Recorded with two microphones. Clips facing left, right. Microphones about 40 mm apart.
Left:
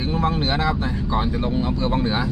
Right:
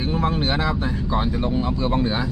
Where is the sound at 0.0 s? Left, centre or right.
Centre.